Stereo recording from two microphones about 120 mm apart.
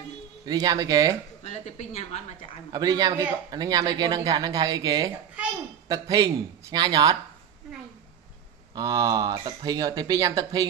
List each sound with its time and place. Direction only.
0.5 s speech: 30° right (ahead or behind)
1.4 s a woman's voice: 70° left (ahead or behind)
2.7 s speech: 30° right (ahead or behind)
8.7 s speech: 30° right (ahead or behind)